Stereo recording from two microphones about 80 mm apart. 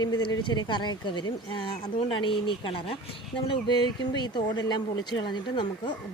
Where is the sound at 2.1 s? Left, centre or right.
Left.